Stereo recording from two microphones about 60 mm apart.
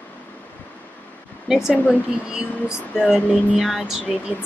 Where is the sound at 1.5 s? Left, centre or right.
Centre.